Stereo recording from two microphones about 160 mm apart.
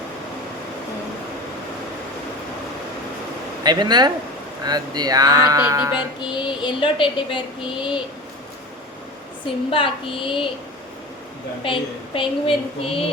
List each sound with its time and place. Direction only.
3.6 s speech: 25° right (ahead or behind)
6.3 s speech: 30° left (ahead or behind)
9.6 s speech: 35° left (ahead or behind)
11.6 s speech: 35° left (ahead or behind)